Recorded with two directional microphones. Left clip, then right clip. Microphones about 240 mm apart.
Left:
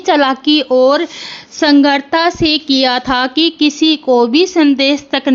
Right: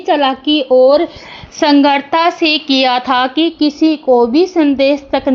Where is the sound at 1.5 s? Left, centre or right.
Left.